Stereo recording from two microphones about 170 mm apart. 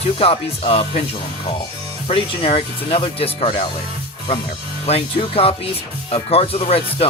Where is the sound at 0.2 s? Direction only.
35° left (ahead or behind).